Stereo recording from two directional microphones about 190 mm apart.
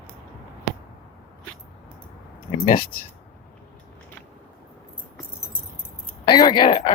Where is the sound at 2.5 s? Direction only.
30° left (ahead or behind).